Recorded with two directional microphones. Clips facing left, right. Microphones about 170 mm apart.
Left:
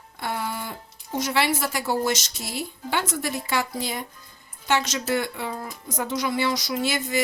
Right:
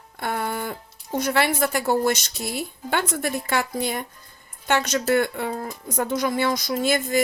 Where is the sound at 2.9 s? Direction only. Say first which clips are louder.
Right 2 dB; 55° right (ahead or behind).